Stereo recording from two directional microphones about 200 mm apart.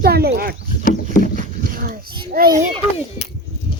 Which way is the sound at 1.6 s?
45° right (ahead or behind).